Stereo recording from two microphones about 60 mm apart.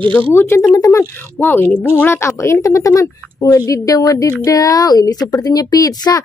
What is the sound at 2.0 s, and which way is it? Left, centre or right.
Speech, left.